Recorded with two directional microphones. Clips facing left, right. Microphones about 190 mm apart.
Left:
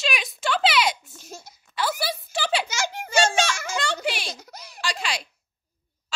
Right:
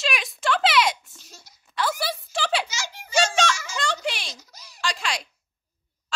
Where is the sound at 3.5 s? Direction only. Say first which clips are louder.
Left 2 dB; 55° left (ahead or behind).